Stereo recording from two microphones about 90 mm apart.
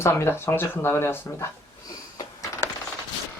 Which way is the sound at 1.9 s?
40° left (ahead or behind).